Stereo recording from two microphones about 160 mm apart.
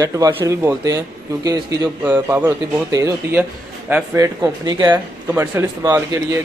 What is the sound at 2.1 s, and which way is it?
A man's voice, 15° right (ahead or behind).